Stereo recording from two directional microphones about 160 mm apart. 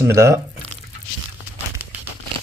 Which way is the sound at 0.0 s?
15° right (ahead or behind).